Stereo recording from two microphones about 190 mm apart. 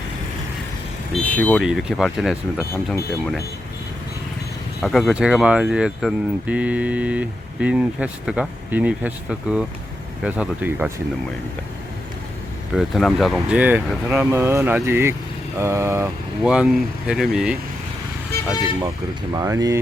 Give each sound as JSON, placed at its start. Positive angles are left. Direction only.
{"t": 1.1, "sound": "speech", "side_deg": 5}
{"t": 2.6, "sound": "speech", "side_deg": 15}
{"t": 4.8, "sound": "speech", "side_deg": 0}
{"t": 12.7, "sound": "speech", "side_deg": 0}
{"t": 16.4, "sound": "speech", "side_deg": -5}
{"t": 19.3, "sound": "speech", "side_deg": -20}